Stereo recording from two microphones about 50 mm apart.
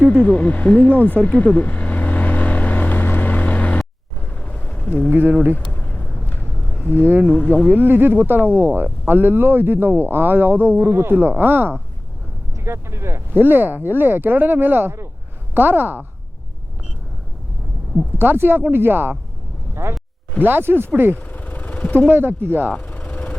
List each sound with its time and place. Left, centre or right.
0.0 s speech: left
1.5 s vehicle: left
7.0 s speech: right
7.3 s speech: left
7.7 s speech: right
12.5 s speech: right
13.3 s speech: right
15.5 s speech: right
18.2 s speech: right
19.7 s speech: right
20.4 s speech: right
21.2 s vehicle: left
22.1 s speech: right
22.8 s vehicle: left